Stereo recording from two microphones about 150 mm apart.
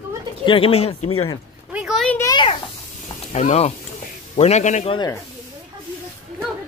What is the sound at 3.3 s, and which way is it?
A man's voice, 45° left (ahead or behind).